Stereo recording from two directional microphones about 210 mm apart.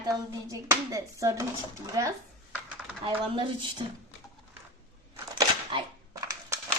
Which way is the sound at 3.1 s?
25° right (ahead or behind).